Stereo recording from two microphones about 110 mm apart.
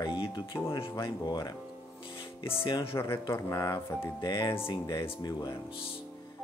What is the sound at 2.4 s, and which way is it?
Speech, 50° left (ahead or behind).